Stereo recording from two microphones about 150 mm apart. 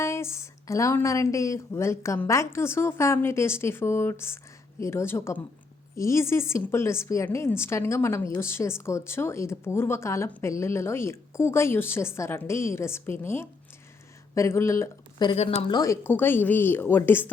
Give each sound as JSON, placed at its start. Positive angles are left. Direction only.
{"t": 0.0, "sound": "a woman's voice", "side_deg": 15}
{"t": 15.4, "sound": "speech", "side_deg": 40}
{"t": 15.7, "sound": "speech", "side_deg": 20}